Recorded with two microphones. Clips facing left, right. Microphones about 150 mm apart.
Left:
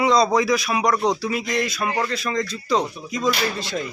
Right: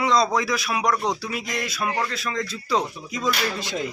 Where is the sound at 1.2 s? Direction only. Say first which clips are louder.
Left 6 dB; 5° right (ahead or behind).